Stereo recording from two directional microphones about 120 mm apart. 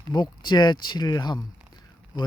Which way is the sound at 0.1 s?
35° left (ahead or behind).